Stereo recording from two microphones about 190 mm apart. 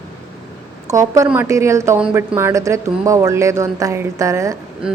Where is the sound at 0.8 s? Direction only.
15° right (ahead or behind).